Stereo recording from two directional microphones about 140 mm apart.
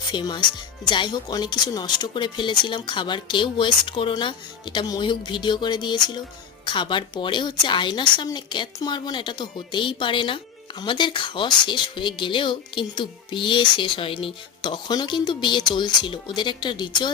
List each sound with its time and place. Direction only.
0.1 s a woman's voice: 35° left (ahead or behind)